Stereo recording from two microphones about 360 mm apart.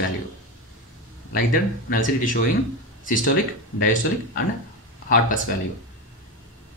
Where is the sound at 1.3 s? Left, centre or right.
Left.